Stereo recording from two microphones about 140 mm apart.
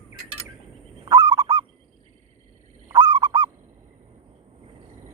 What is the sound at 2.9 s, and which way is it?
Honk, 30° right (ahead or behind).